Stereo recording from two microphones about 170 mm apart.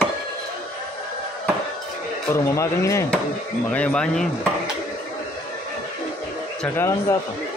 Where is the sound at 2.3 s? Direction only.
15° left (ahead or behind).